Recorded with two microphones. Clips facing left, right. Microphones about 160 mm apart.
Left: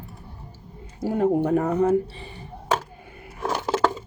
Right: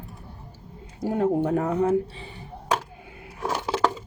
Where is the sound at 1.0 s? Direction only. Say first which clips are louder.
Left 2 dB; centre (ahead or behind).